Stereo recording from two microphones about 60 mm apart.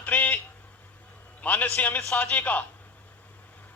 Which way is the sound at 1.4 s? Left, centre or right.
Left.